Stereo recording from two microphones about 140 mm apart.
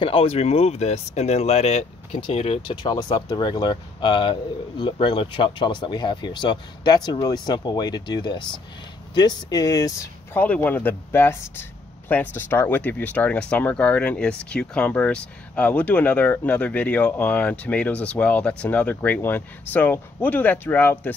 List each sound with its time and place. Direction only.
0.0 s speech: 40° left (ahead or behind); by 10.4 s 25° left (ahead or behind)
10.4 s speech: 10° left (ahead or behind)